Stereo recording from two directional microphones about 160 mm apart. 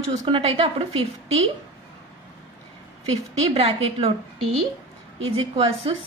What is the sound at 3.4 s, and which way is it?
Speech, 35° right (ahead or behind).